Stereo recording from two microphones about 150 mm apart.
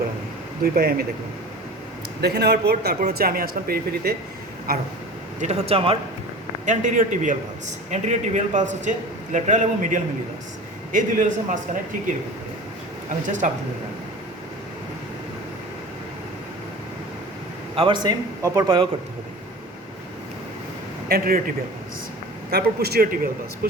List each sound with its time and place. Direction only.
0.6 s a man's voice: 90° right
2.2 s a man's voice: 90° right
5.4 s speech: 50° right (ahead or behind)
6.7 s a man's voice: 60° right (ahead or behind)
13.2 s a man's voice: 55° right (ahead or behind)
17.7 s speech: 35° right (ahead or behind)
21.1 s speech: 80° right
22.4 s a man's voice: 90° right